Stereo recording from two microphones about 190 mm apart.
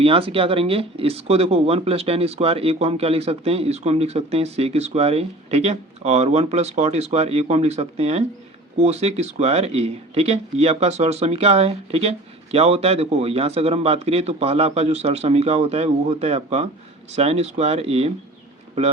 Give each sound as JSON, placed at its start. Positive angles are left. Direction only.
{"t": 0.0, "sound": "speech", "side_deg": -30}